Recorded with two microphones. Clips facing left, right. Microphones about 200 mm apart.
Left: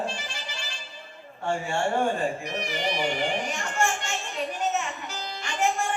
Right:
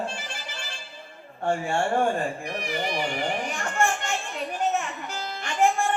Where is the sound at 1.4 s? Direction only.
50° right (ahead or behind).